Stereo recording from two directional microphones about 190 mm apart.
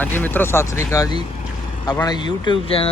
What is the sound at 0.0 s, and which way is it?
Speech, 10° left (ahead or behind).